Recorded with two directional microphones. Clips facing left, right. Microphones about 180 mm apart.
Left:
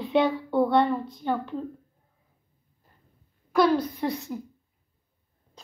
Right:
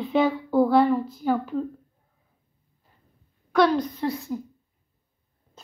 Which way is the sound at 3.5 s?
5° left (ahead or behind).